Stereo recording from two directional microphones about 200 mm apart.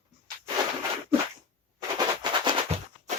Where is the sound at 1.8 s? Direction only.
20° right (ahead or behind).